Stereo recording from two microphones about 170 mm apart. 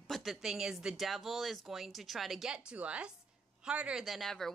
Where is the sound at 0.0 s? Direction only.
Centre (ahead or behind).